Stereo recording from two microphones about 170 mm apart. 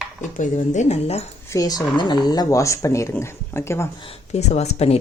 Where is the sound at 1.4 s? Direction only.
20° left (ahead or behind).